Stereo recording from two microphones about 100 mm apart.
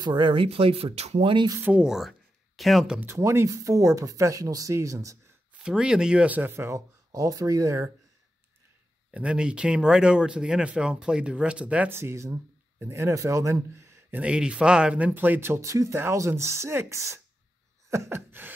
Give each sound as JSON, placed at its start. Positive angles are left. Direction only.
{"t": 0.0, "sound": "speech", "side_deg": -50}
{"t": 1.6, "sound": "speech", "side_deg": -10}
{"t": 3.0, "sound": "speech", "side_deg": -25}
{"t": 5.5, "sound": "speech", "side_deg": -10}
{"t": 9.1, "sound": "speech", "side_deg": -10}
{"t": 11.9, "sound": "speech", "side_deg": -25}
{"t": 14.2, "sound": "speech", "side_deg": -10}
{"t": 17.8, "sound": "a sound", "side_deg": -30}